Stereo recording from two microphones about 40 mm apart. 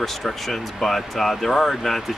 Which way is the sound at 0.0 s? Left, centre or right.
Centre.